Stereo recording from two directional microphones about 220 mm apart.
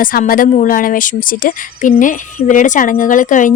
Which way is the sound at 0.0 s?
40° left (ahead or behind).